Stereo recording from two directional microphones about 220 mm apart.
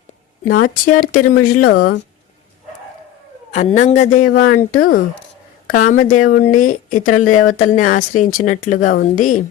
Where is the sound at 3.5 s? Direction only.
35° left (ahead or behind).